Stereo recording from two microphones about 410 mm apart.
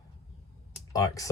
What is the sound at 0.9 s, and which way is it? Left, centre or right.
Speech, centre.